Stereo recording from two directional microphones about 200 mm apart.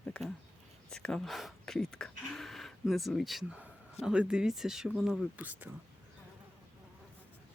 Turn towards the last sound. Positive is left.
turn(degrees=-10)  # may be behind; listen again after turning